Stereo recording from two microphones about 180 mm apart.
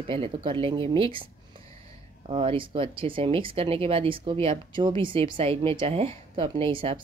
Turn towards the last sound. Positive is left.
turn(degrees=-30)  # may be behind; listen again after turning